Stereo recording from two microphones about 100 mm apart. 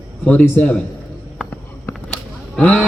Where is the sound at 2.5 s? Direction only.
10° left (ahead or behind).